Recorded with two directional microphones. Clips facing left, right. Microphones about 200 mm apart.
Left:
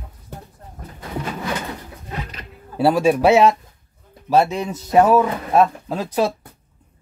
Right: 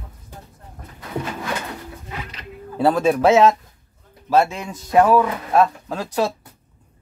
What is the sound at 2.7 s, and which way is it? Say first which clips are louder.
Speech: left 1 dB; 10° left (ahead or behind).